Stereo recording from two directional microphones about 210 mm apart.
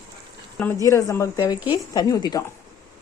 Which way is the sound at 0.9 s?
15° left (ahead or behind).